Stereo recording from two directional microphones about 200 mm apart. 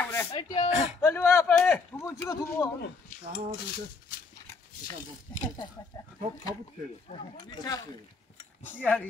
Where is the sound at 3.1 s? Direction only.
40° left (ahead or behind).